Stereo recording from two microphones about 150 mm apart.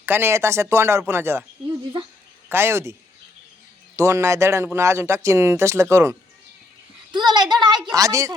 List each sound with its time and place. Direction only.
0.0 s speech: 15° right (ahead or behind)
2.5 s speech: 15° right (ahead or behind)
3.9 s speech: 20° right (ahead or behind)
7.1 s a sound: 30° right (ahead or behind)
7.9 s speech: 20° right (ahead or behind)